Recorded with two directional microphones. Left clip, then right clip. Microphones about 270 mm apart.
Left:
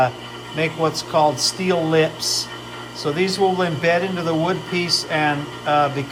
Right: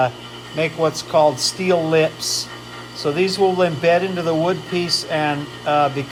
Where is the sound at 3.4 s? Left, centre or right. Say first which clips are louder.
Right 3 dB; right.